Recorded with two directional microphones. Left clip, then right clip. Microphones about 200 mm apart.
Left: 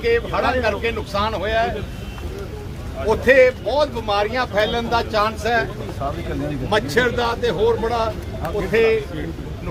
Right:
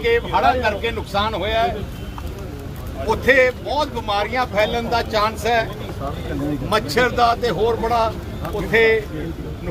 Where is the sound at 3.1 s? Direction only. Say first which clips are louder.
Left 2 dB; centre (ahead or behind).